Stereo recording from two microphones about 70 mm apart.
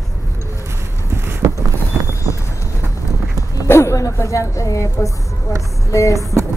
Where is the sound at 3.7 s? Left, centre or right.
Left.